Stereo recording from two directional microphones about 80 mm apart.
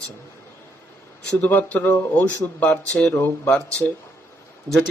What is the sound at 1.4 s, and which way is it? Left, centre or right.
Speech, left.